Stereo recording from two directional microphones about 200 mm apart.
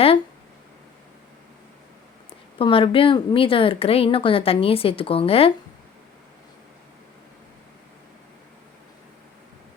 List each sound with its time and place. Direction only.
2.6 s speech: 25° left (ahead or behind)